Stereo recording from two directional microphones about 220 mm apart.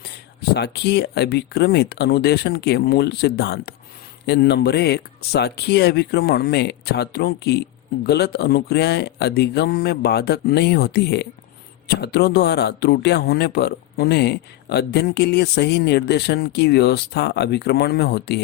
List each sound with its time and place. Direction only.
0.5 s a man's voice: 50° left (ahead or behind)